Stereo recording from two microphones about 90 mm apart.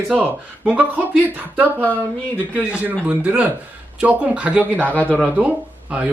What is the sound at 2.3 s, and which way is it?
A man's voice, 20° right (ahead or behind).